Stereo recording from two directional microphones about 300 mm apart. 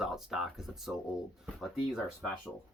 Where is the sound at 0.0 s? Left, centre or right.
Centre.